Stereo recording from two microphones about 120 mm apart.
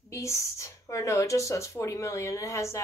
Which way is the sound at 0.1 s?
25° left (ahead or behind).